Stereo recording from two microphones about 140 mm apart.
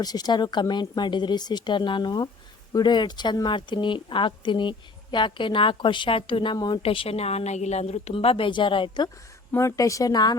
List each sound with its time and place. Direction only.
0.0 s a woman's voice: 30° left (ahead or behind)
9.5 s speech: 20° left (ahead or behind)